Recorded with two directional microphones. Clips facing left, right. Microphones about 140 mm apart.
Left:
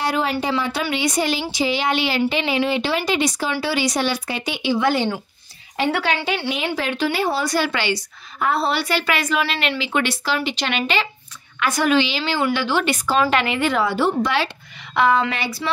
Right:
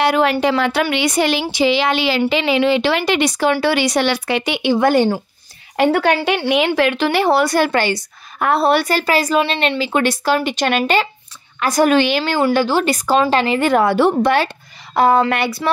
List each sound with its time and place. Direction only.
0.0 s speech: 65° right (ahead or behind)
1.5 s speech: 85° right; by 4.7 s 65° right (ahead or behind)
4.7 s speech: 50° right (ahead or behind)
6.2 s a woman's voice: 60° right (ahead or behind)
12.4 s speech: 35° right (ahead or behind)
13.6 s speech: 50° right (ahead or behind)
15.0 s speech: 40° right (ahead or behind)
15.3 s a woman's voice: 60° right (ahead or behind)